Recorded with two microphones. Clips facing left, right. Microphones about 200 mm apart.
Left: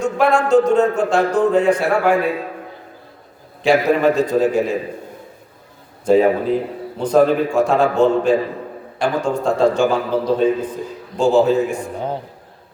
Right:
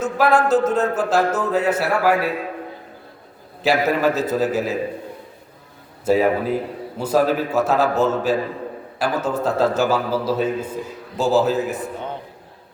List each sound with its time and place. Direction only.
0.0 s speech: 5° right (ahead or behind)
3.6 s speech: 5° right (ahead or behind)
6.1 s a man's voice: 5° right (ahead or behind)
11.9 s a man's voice: 35° left (ahead or behind)